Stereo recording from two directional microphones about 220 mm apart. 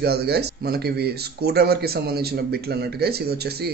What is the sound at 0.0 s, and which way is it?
Speech, 45° right (ahead or behind).